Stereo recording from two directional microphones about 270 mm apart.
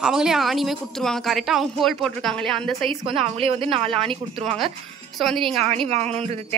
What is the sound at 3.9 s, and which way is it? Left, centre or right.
A woman's voice, centre.